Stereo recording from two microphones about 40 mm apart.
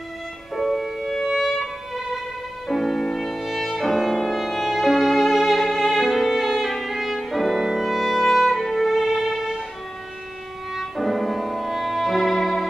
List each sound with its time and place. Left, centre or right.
0.6 s violin: centre
2.7 s music: centre
3.3 s music: centre
6.0 s violin: centre
6.7 s music: centre
10.7 s music: centre